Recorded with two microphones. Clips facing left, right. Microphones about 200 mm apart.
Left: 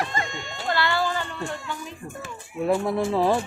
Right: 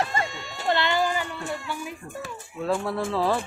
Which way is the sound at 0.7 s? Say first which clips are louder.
Right 1 dB; 20° right (ahead or behind).